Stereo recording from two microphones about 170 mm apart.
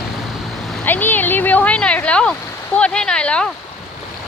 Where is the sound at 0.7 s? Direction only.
10° left (ahead or behind).